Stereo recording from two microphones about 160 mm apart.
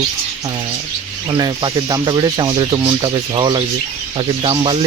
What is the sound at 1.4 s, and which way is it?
Speech, 25° right (ahead or behind).